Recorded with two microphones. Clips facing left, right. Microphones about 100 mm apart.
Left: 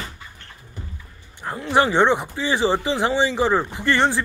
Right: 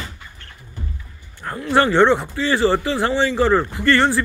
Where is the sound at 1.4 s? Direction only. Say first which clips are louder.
Even; 15° left (ahead or behind).